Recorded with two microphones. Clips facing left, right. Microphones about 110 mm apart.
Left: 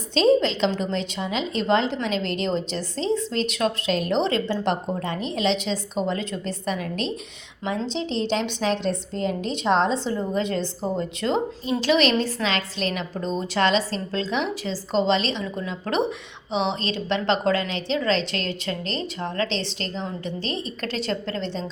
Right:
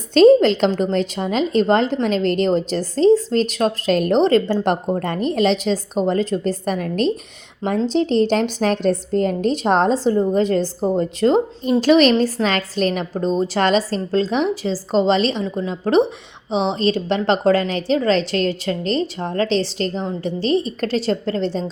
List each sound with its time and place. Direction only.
0.1 s a woman's voice: 50° right (ahead or behind); by 7.8 s 35° right (ahead or behind)
7.9 s a woman's voice: 45° right (ahead or behind)